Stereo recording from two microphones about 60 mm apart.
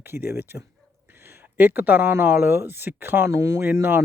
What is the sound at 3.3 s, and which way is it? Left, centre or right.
Speech, right.